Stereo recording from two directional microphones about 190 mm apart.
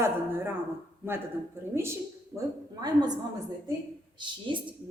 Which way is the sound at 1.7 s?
15° right (ahead or behind).